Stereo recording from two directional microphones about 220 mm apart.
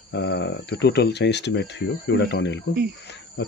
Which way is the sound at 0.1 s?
50° left (ahead or behind).